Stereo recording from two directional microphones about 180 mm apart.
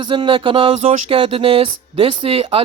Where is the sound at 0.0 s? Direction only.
25° right (ahead or behind).